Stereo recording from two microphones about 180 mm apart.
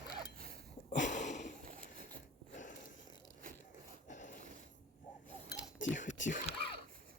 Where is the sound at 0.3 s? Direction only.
55° right (ahead or behind).